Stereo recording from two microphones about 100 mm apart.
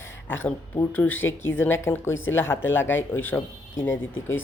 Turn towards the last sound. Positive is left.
turn(degrees=20)  # may be behind; listen again after turning